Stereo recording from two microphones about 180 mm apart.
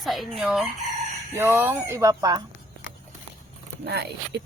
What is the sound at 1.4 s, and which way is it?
Speech, 10° right (ahead or behind).